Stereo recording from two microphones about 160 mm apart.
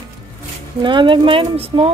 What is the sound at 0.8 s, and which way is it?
Speech, 30° right (ahead or behind).